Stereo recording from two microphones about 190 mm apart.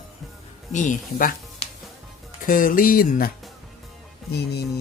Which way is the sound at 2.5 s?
45° left (ahead or behind).